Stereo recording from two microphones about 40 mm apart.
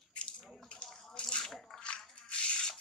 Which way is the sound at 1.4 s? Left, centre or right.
Centre.